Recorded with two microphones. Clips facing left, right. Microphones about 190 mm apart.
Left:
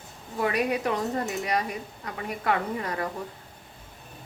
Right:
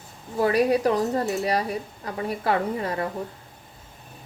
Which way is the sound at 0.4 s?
35° right (ahead or behind).